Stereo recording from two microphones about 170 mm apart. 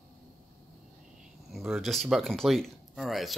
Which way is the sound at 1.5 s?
Centre (ahead or behind).